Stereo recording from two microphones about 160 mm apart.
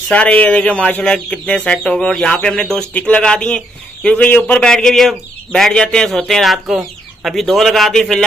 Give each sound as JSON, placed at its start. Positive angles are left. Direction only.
{"t": 0.1, "sound": "speech", "side_deg": 10}